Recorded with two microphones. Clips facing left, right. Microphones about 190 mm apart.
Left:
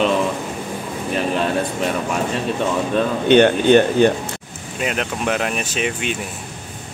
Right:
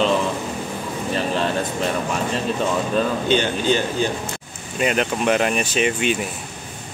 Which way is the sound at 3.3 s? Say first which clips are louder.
Left 7 dB; 60° left (ahead or behind).